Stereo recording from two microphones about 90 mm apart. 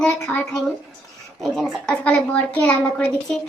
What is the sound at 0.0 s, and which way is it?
A woman's voice, 10° left (ahead or behind).